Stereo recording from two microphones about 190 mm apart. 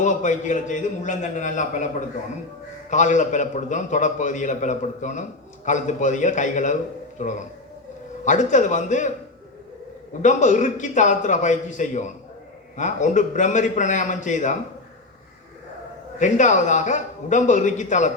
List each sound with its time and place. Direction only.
0.0 s a man's voice: 40° left (ahead or behind)
2.9 s a man's voice: 40° left (ahead or behind)
10.2 s a man's voice: 40° left (ahead or behind)
16.1 s a man's voice: 40° left (ahead or behind)